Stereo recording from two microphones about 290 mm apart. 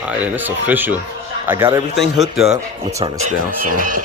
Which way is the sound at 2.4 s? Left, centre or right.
Right.